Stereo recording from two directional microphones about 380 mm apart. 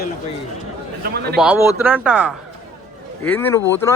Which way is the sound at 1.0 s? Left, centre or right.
Right.